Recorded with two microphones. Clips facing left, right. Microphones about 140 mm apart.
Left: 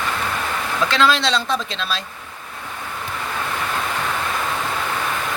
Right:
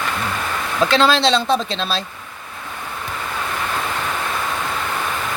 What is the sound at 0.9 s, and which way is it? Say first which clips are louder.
Speech: right 3 dB; 30° right (ahead or behind).